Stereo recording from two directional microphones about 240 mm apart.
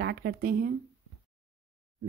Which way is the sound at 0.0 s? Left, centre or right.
Right.